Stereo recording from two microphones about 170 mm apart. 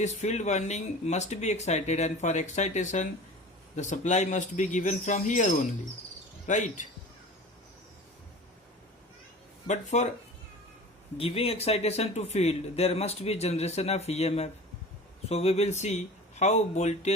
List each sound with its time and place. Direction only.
0.0 s speech: 40° left (ahead or behind)
9.6 s speech: 45° left (ahead or behind)
11.2 s speech: 35° left (ahead or behind)